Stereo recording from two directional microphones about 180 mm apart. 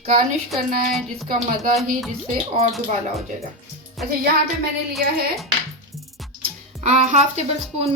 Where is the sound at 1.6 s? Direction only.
50° right (ahead or behind).